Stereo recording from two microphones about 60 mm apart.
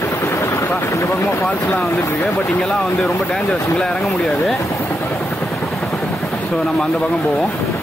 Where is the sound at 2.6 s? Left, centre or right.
Centre.